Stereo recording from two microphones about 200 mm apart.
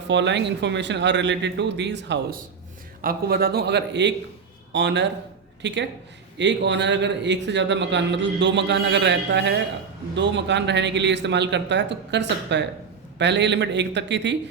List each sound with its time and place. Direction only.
0.1 s a man's voice: 60° right (ahead or behind)
3.0 s a man's voice: 50° right (ahead or behind)